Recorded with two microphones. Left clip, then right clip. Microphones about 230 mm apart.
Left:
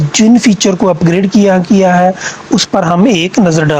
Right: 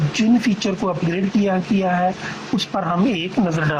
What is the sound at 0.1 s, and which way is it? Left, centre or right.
Speech, left.